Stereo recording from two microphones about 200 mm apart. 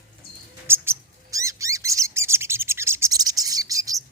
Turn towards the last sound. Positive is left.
turn(degrees=-15)  # may be behind; listen again after turning